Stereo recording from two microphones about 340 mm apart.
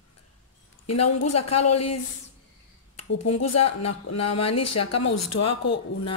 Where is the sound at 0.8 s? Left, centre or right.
Left.